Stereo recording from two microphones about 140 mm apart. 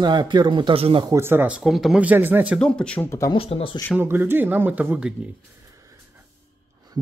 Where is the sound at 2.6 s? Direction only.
5° left (ahead or behind).